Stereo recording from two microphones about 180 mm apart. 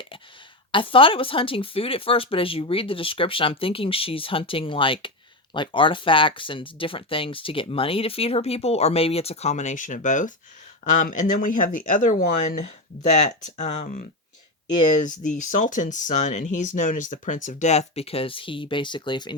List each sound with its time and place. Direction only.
0.7 s speech: 30° left (ahead or behind)